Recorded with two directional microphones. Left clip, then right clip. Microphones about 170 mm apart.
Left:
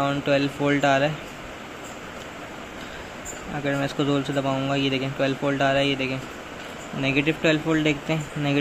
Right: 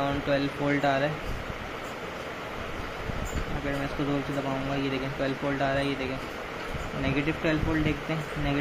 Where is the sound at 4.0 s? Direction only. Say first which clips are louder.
Left 7 dB; 60° left (ahead or behind).